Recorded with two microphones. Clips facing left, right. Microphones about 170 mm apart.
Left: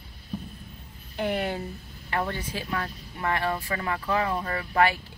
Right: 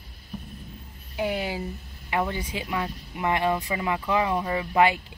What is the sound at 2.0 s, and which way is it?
Speech, 15° right (ahead or behind).